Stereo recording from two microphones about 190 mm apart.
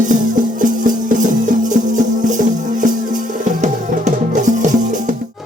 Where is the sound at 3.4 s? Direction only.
40° right (ahead or behind).